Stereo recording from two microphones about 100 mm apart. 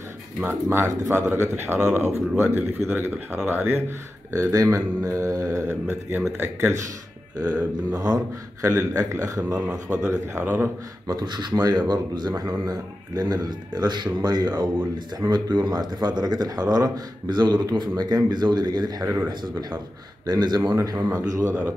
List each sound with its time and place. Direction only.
0.5 s speech: 25° right (ahead or behind)
4.3 s speech: 35° right (ahead or behind)
5.7 s speech: 20° right (ahead or behind)
7.9 s speech: 40° right (ahead or behind)
9.8 s speech: 20° right (ahead or behind)
11.1 s speech: 45° right (ahead or behind)
20.7 s speech: 35° right (ahead or behind)